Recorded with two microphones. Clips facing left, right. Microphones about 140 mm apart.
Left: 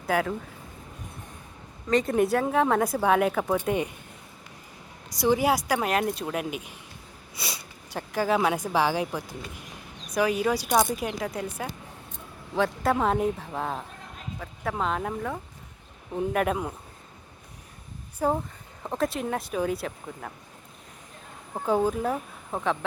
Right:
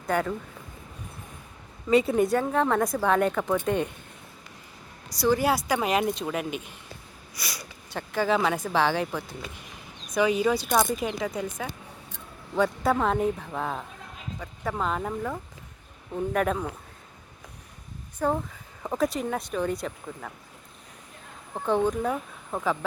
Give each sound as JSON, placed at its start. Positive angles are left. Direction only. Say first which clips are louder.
{"t": 0.1, "sound": "a woman's voice", "louder": "even", "side_deg": 0}
{"t": 1.9, "sound": "a woman's voice", "louder": "right 1 dB", "side_deg": -5}
{"t": 5.2, "sound": "a woman's voice", "louder": "even", "side_deg": 15}
{"t": 7.3, "sound": "speech", "louder": "left 2 dB", "side_deg": 25}
{"t": 7.9, "sound": "a woman's voice", "louder": "even", "side_deg": 10}
{"t": 18.2, "sound": "speech", "louder": "left 1 dB", "side_deg": 10}
{"t": 18.8, "sound": "a woman's voice", "louder": "right 1 dB", "side_deg": 0}
{"t": 21.5, "sound": "speech", "louder": "even", "side_deg": 10}